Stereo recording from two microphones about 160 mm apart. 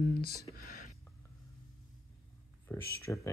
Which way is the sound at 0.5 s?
65° left (ahead or behind).